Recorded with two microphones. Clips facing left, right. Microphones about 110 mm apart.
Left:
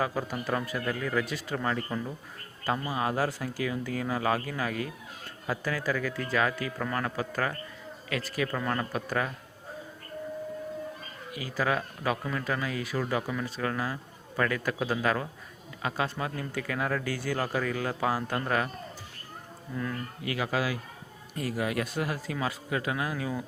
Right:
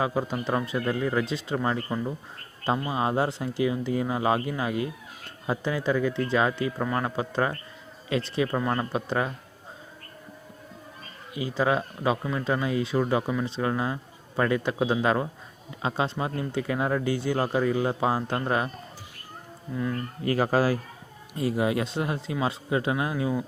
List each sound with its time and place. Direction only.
0.0 s speech: 20° right (ahead or behind)
11.3 s speech: 20° right (ahead or behind)
19.7 s speech: 10° right (ahead or behind)
20.2 s speech: 40° right (ahead or behind)
21.3 s speech: 25° right (ahead or behind)